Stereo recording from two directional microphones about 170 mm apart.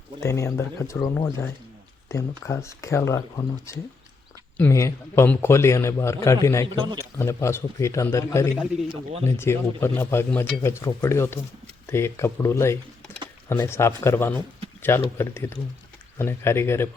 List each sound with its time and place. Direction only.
0.2 s a man's voice: 15° left (ahead or behind)
2.5 s a man's voice: 15° left (ahead or behind)
6.7 s a man's voice: 25° right (ahead or behind)
7.2 s a man's voice: 15° left (ahead or behind)